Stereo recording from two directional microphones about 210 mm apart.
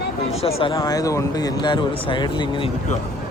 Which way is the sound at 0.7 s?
15° left (ahead or behind).